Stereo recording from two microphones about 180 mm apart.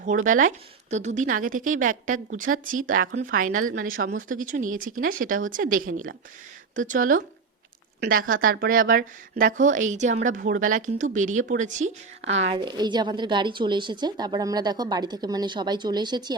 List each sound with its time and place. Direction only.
0.0 s a woman's voice: 45° right (ahead or behind)
12.5 s speech: 25° right (ahead or behind)